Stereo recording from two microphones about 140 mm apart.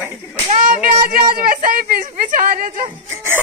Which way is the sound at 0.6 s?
70° right (ahead or behind).